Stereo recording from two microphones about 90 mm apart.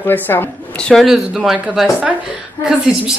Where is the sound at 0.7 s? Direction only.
10° left (ahead or behind).